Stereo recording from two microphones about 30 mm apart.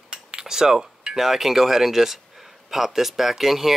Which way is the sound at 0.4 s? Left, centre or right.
Centre.